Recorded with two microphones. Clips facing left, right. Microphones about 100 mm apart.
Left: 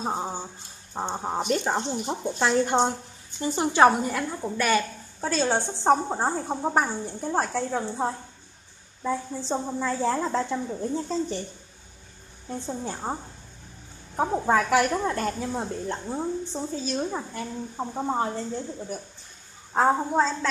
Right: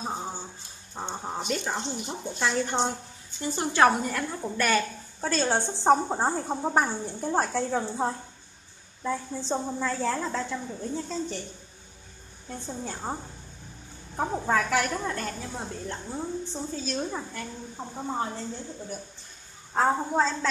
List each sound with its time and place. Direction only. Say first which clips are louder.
0.0 s music: left 4 dB; 35° left (ahead or behind)
1.1 s a woman's voice: left 4 dB; 25° left (ahead or behind)
1.4 s speech: left 5 dB; 45° left (ahead or behind)
3.4 s a woman's voice: left 3 dB; 20° left (ahead or behind)
4.1 s a woman's voice: left 2 dB; 5° left (ahead or behind)
12.4 s a woman's voice: left 4 dB; 15° left (ahead or behind)
16.7 s a woman's voice: left 3 dB; 15° left (ahead or behind)
19.7 s a woman's voice: left 3 dB; 15° left (ahead or behind)